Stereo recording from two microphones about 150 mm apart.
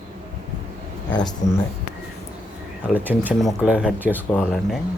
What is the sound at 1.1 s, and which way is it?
Speech, 30° left (ahead or behind).